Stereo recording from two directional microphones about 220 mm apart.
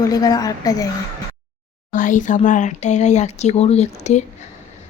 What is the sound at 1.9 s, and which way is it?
Speech, 35° left (ahead or behind).